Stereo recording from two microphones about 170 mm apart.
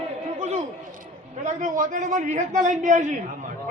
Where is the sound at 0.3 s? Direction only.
40° right (ahead or behind).